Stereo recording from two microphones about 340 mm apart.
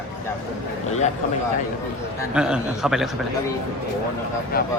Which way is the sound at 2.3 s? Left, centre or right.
Centre.